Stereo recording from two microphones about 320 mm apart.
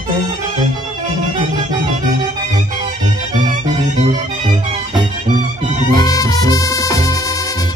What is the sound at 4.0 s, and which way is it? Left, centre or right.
Music, centre.